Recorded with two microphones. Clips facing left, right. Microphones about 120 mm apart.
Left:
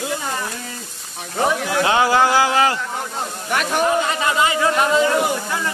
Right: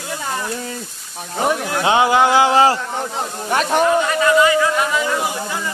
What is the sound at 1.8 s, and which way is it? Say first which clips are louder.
A man's voice: right 2 dB; 20° right (ahead or behind).